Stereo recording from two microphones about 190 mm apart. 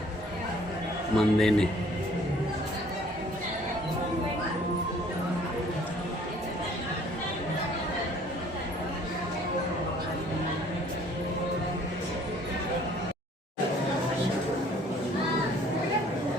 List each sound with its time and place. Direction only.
1.1 s a man's voice: centre (ahead or behind)